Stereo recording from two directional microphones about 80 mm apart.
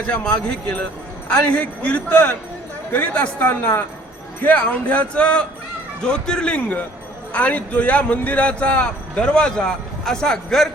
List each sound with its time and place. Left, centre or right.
0.1 s a woman's voice: centre